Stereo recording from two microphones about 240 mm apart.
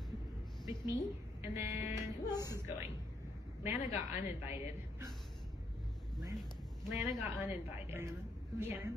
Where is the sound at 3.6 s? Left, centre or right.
Centre.